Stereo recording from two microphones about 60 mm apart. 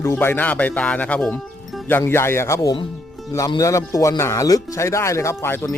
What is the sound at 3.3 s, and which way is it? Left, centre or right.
Speech, left.